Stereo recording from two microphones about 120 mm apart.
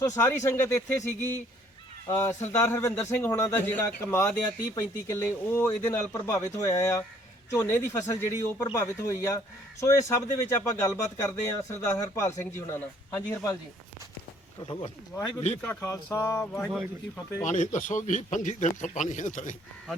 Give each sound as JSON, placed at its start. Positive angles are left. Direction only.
{"t": 0.0, "sound": "speech", "side_deg": 20}
{"t": 15.1, "sound": "speech", "side_deg": 25}
{"t": 17.4, "sound": "a man's voice", "side_deg": 90}